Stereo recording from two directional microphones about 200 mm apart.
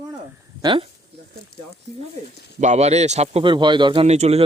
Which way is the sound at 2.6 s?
35° right (ahead or behind).